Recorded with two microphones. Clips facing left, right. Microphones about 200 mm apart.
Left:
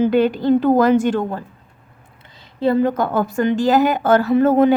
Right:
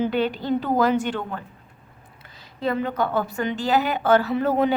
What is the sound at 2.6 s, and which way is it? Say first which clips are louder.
A woman's voice: left 7 dB; 35° left (ahead or behind).